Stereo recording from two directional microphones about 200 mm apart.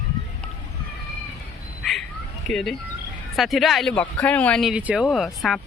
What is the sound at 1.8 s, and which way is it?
Bird, centre (ahead or behind).